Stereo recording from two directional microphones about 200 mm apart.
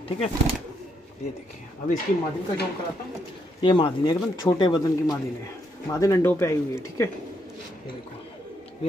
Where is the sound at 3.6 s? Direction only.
25° left (ahead or behind).